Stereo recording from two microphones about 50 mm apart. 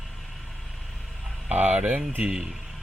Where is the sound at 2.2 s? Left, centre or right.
Centre.